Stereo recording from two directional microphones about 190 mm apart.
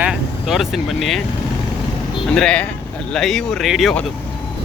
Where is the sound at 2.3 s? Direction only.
5° left (ahead or behind).